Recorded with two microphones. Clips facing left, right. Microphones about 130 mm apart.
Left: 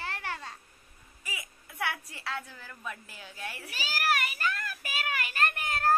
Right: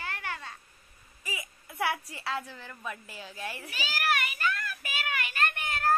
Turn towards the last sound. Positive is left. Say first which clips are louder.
# left 1 dB
turn(degrees=35)  # may be behind; listen again after turning